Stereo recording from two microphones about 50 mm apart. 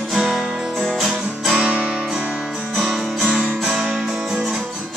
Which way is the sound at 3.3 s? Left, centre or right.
Centre.